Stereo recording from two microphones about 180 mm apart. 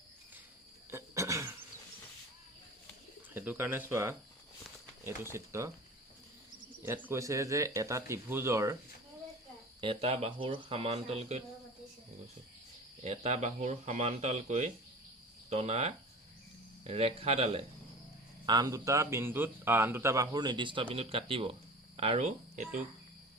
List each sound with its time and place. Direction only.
0.9 s cough: 15° right (ahead or behind)
3.3 s a man's voice: 10° right (ahead or behind)
6.8 s a man's voice: 15° right (ahead or behind)
9.8 s speech: 30° right (ahead or behind)
13.1 s speech: 40° right (ahead or behind)
18.4 s a man's voice: 20° right (ahead or behind); by 22.8 s 40° right (ahead or behind)